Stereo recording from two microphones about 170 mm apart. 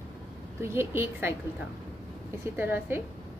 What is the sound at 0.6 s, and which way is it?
Speech, 15° right (ahead or behind).